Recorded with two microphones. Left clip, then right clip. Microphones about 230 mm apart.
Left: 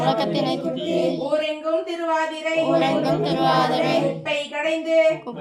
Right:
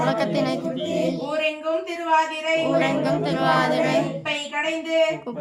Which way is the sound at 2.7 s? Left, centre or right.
Centre.